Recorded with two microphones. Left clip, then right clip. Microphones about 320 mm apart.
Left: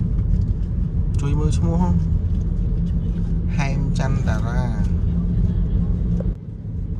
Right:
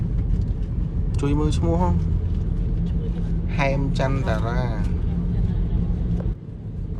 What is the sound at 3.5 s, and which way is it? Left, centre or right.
Speech, centre.